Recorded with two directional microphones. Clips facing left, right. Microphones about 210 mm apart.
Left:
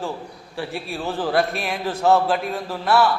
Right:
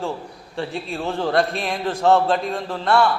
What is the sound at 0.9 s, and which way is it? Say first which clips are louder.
A man's voice: right 1 dB; centre (ahead or behind).